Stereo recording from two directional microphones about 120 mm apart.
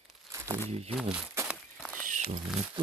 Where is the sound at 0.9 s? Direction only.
5° right (ahead or behind).